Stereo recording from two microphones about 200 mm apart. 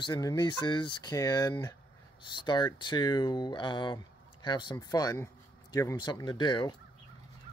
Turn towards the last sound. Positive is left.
turn(degrees=20)  # may be behind; listen again after turning